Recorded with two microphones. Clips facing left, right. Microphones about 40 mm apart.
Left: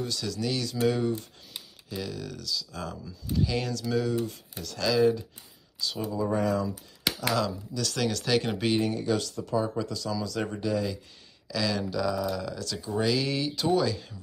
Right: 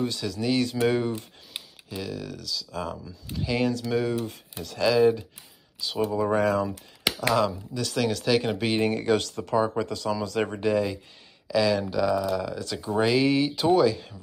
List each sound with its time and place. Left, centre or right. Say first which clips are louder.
0.2 s speech: right 6 dB; centre
1.9 s speech: right 1 dB; centre
6.1 s speech: right 3 dB; right
7.1 s speech: right 4 dB; centre
8.0 s speech: right 3 dB; centre
8.8 s speech: right 4 dB; right
11.4 s speech: right 6 dB; right